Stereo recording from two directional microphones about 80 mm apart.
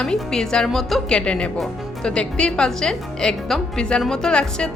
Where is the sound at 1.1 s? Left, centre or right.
Centre.